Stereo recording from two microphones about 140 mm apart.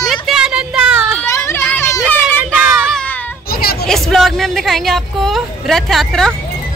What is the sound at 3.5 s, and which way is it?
Hubbub, 90° left.